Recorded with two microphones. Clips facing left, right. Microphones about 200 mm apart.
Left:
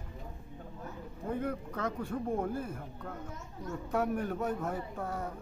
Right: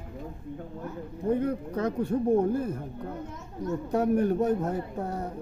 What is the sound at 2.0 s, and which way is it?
Speech, 35° right (ahead or behind).